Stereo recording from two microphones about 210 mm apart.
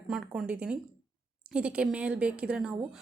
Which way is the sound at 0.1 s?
5° right (ahead or behind).